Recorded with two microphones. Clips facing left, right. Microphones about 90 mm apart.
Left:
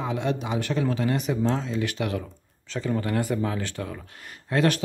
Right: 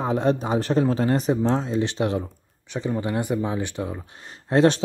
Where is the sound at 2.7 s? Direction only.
20° right (ahead or behind).